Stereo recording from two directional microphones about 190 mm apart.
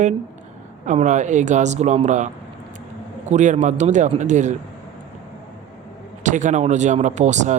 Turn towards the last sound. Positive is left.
turn(degrees=-40)  # may be behind; listen again after turning